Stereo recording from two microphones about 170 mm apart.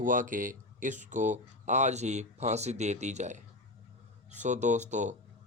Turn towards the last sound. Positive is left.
turn(degrees=-45)  # may be behind; listen again after turning